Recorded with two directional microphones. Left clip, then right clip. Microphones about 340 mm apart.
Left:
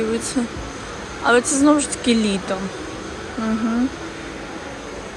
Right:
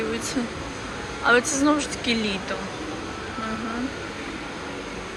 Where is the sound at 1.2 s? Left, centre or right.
Centre.